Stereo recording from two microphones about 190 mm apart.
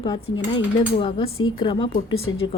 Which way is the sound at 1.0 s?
25° left (ahead or behind).